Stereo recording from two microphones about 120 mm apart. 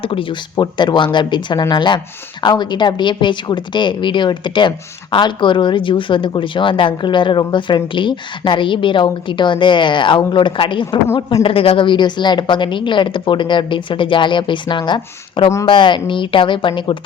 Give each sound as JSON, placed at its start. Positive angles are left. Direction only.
{"t": 0.0, "sound": "a woman's voice", "side_deg": 50}
{"t": 11.1, "sound": "speech", "side_deg": 25}
{"t": 11.4, "sound": "a woman's voice", "side_deg": 50}